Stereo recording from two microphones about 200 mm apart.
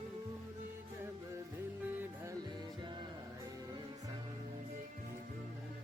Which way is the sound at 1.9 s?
10° right (ahead or behind).